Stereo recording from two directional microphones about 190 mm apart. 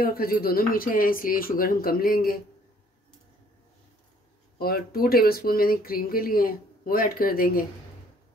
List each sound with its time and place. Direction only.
0.0 s speech: 50° left (ahead or behind)
4.6 s speech: 55° left (ahead or behind)